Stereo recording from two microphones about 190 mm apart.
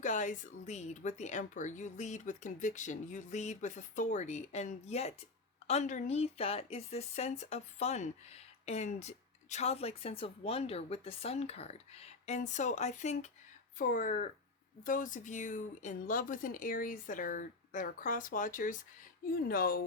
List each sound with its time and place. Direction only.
0.0 s speech: 40° left (ahead or behind)